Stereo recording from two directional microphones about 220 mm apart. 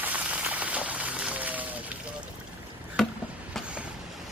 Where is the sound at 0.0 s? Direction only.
5° right (ahead or behind).